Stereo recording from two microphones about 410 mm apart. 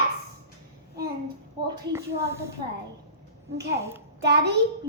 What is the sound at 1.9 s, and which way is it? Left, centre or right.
Speech, centre.